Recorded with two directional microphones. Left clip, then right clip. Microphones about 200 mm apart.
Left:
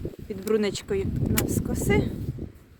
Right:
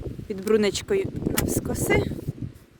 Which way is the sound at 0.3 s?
50° right (ahead or behind).